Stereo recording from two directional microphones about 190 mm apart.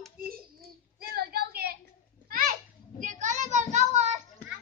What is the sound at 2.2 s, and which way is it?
Children playing, 45° right (ahead or behind).